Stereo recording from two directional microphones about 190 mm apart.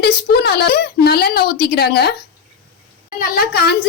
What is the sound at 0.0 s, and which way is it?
Speech, 60° left (ahead or behind).